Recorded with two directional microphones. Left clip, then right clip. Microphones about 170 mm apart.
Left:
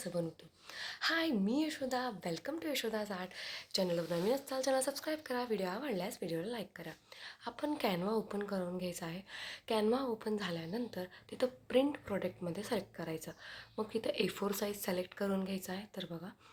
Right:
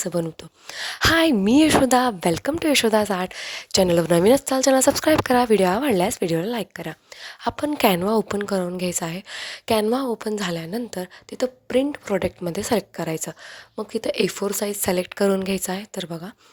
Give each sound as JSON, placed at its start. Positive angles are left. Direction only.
{"t": 0.0, "sound": "speech", "side_deg": -75}
{"t": 0.9, "sound": "a woman's voice", "side_deg": -90}
{"t": 7.8, "sound": "a woman's voice", "side_deg": -75}